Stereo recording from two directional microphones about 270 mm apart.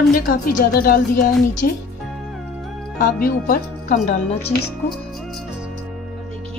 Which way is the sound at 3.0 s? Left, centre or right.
Left.